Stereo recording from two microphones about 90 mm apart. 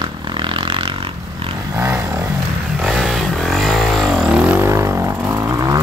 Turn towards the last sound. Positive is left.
turn(degrees=-40)  # may be behind; listen again after turning